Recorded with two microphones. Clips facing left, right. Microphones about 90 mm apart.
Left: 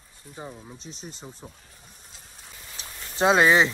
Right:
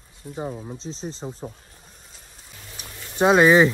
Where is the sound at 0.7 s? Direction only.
30° right (ahead or behind).